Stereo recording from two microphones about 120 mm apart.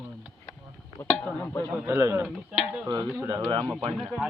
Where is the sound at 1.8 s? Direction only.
20° right (ahead or behind).